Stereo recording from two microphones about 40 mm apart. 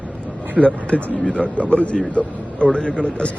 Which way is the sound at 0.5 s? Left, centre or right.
Left.